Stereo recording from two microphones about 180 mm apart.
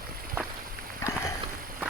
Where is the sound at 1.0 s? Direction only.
15° left (ahead or behind).